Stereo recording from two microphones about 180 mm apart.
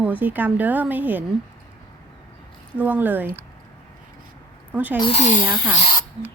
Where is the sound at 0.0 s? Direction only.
10° right (ahead or behind).